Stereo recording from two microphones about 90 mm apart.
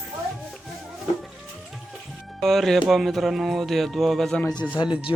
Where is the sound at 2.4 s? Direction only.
5° left (ahead or behind).